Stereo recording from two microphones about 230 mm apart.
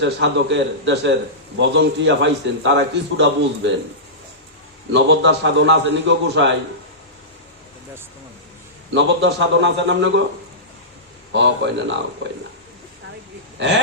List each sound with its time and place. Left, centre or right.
0.0 s a man's voice: right
4.9 s a man's voice: right
8.9 s a man's voice: right
11.3 s a man's voice: right
13.6 s a man's voice: right